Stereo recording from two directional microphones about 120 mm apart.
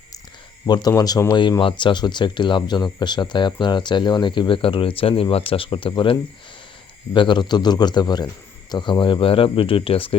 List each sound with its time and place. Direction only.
0.6 s speech: 35° left (ahead or behind)